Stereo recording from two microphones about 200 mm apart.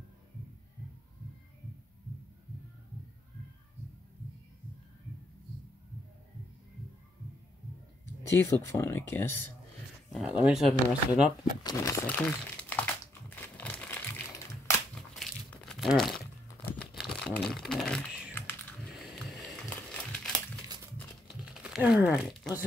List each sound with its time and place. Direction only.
8.4 s speech: 15° left (ahead or behind)
10.0 s speech: centre (ahead or behind)
11.6 s crumpling: 15° left (ahead or behind)
20.6 s crumpling: 20° right (ahead or behind)
21.6 s speech: 5° right (ahead or behind)